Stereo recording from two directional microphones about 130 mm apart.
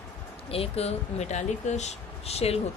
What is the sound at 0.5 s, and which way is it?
Speech, 50° left (ahead or behind).